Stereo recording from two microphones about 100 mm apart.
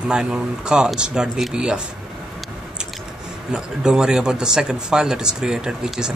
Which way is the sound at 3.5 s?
5° right (ahead or behind).